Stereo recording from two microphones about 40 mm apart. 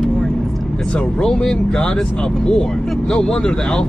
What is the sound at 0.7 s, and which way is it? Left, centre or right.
Speech, left.